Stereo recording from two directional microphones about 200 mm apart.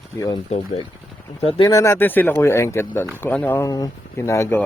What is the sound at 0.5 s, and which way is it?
Speech, 35° left (ahead or behind).